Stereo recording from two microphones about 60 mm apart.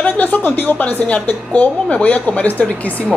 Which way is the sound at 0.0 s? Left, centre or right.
Left.